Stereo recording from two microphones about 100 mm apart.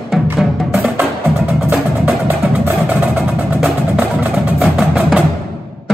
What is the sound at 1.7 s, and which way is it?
Music, 15° right (ahead or behind).